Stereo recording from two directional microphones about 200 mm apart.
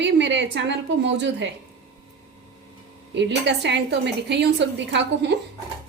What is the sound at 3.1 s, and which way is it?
A woman's voice, 60° right (ahead or behind).